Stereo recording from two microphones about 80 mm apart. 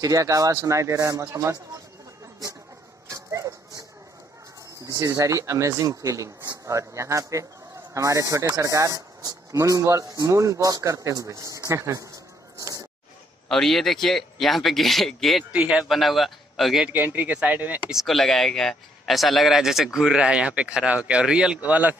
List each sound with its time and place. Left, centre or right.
0.0 s speech: right
3.1 s a sound: right
4.8 s speech: right
12.5 s a sound: right
13.5 s speech: centre
15.5 s speech: centre
15.9 s speech: centre
16.9 s speech: right
17.8 s speech: centre